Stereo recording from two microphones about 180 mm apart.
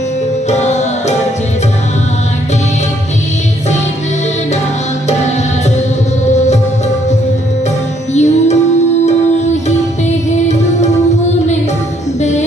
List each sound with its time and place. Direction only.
0.5 s music: 40° left (ahead or behind)
6.3 s music: 40° left (ahead or behind)
8.1 s music: 40° left (ahead or behind)
12.2 s music: 40° left (ahead or behind)